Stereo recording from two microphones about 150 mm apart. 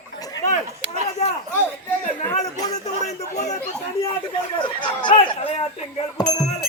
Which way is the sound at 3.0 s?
50° left (ahead or behind).